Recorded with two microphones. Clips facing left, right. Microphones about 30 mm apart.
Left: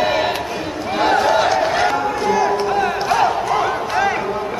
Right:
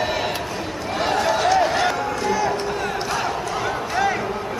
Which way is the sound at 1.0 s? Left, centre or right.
Centre.